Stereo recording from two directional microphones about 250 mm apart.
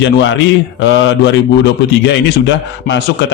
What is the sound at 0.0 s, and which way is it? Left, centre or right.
A man's voice, left.